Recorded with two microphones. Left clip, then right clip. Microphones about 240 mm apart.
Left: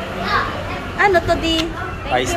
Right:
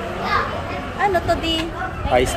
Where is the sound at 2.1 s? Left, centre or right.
Right.